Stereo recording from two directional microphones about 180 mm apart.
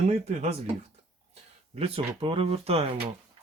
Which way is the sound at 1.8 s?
30° right (ahead or behind).